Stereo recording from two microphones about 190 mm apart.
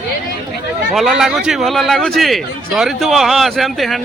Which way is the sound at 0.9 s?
Centre (ahead or behind).